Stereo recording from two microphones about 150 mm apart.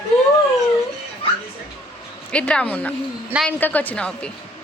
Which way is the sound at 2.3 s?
5° left (ahead or behind).